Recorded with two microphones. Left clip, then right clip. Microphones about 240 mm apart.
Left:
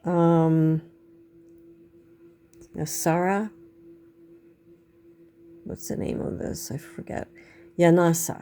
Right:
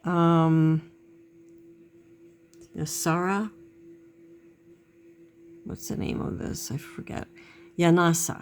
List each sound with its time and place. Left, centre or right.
0.0 s a sound: centre
2.7 s speech: centre
5.6 s speech: centre